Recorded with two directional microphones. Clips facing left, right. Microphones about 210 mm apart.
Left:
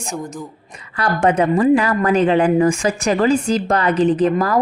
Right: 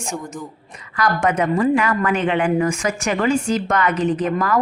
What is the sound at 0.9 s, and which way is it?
A woman's voice, 30° left (ahead or behind).